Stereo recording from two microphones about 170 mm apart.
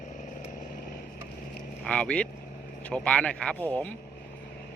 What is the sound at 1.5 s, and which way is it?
Vehicle, 5° left (ahead or behind).